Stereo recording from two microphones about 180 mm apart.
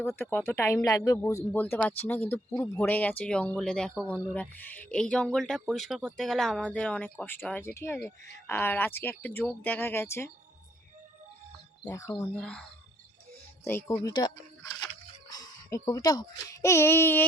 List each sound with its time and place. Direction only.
0.0 s speech: 15° left (ahead or behind)
11.9 s speech: 15° left (ahead or behind)
13.7 s a child's voice: 15° left (ahead or behind)